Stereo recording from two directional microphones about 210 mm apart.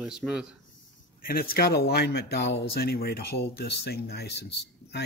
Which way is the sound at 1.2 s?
45° left (ahead or behind).